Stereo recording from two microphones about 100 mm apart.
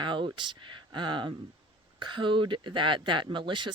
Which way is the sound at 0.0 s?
50° right (ahead or behind).